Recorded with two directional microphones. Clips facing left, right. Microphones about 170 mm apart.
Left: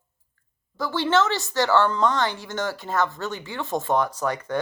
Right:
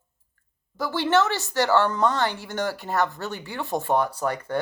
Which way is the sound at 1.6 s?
15° right (ahead or behind).